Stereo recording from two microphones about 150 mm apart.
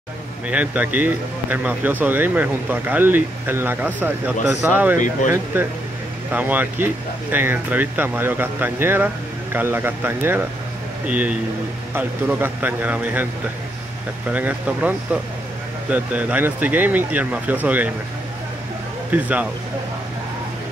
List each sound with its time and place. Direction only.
0.5 s speech: 10° right (ahead or behind)
4.9 s speech: 60° left (ahead or behind)
5.5 s speech: 10° right (ahead or behind)
14.3 s speech: 10° right (ahead or behind)
19.1 s speech: 10° right (ahead or behind)